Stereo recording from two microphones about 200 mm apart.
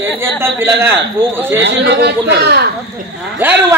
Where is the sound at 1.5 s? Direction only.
60° right (ahead or behind).